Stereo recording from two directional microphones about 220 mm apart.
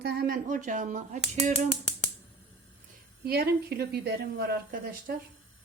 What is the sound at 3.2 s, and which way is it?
A woman's voice, 45° right (ahead or behind).